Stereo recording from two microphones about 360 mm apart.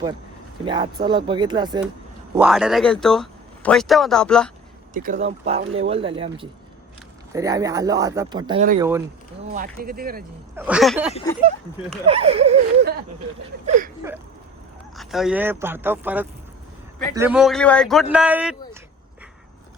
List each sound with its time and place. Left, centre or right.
0.6 s speech: centre
4.9 s speech: right
9.5 s speech: right
10.5 s speech: centre
12.0 s speech: centre
14.9 s speech: centre